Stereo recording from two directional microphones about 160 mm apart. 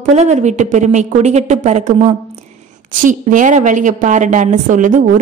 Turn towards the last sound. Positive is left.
turn(degrees=-55)  # may be behind; listen again after turning